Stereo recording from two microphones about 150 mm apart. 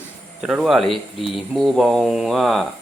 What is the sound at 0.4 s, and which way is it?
Speech, 5° right (ahead or behind).